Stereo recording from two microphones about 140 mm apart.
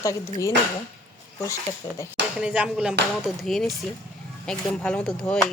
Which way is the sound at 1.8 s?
30° left (ahead or behind).